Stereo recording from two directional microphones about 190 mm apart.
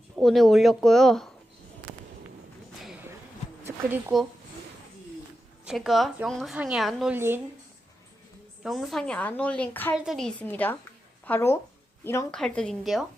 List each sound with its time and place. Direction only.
0.2 s a woman's voice: centre (ahead or behind)
3.8 s speech: 50° right (ahead or behind)
5.6 s a woman's voice: centre (ahead or behind)
8.6 s a woman's voice: centre (ahead or behind)
9.9 s a woman's voice: centre (ahead or behind)